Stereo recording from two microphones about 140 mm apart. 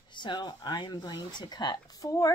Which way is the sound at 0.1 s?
35° left (ahead or behind).